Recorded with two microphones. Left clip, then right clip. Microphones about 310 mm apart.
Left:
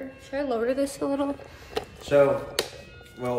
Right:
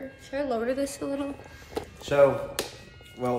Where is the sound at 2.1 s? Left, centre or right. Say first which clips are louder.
Left 1 dB; centre.